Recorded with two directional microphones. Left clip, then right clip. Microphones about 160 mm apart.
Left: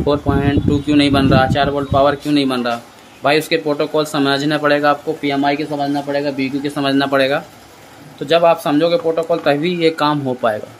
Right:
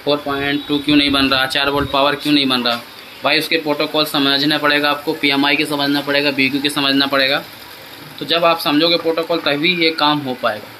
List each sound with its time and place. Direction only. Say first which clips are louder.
0.4 s speech: left 1 dB; 45° left (ahead or behind)
5.2 s speech: right 2 dB; 25° left (ahead or behind)
6.7 s speech: even; 45° left (ahead or behind)